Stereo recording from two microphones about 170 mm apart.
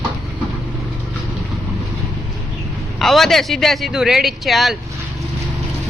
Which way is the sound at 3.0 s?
Centre (ahead or behind).